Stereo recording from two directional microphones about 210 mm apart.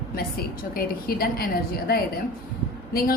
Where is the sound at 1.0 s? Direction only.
45° left (ahead or behind).